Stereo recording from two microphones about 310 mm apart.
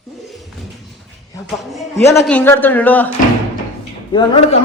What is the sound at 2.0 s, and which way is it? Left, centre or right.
A woman's voice, centre.